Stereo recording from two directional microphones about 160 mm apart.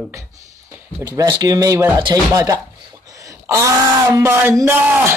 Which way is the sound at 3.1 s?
20° right (ahead or behind).